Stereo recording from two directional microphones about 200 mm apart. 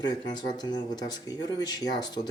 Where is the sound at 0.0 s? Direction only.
20° left (ahead or behind).